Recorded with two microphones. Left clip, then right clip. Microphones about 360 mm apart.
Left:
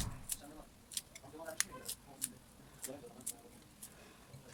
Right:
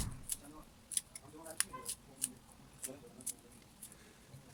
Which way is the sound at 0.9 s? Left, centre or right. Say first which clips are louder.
Even; centre.